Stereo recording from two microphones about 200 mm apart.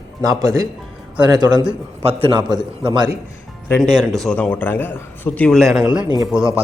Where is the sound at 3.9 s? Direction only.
Centre (ahead or behind).